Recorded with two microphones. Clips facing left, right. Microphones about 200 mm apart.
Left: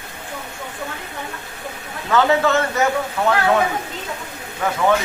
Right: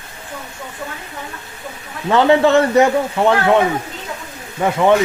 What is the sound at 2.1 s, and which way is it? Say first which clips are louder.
A man's voice: right 5 dB; 30° right (ahead or behind).